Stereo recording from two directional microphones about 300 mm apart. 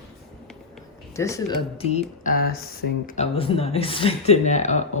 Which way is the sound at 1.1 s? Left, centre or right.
Centre.